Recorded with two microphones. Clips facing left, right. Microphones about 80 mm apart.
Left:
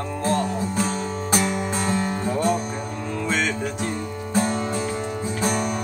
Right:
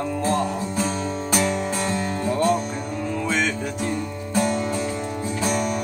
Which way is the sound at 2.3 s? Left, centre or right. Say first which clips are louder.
Right 3 dB; centre.